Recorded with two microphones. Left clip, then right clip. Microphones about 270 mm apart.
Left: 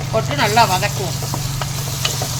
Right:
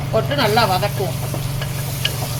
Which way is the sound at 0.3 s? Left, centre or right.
Centre.